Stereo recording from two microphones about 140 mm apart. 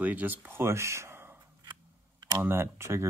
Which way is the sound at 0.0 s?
10° right (ahead or behind).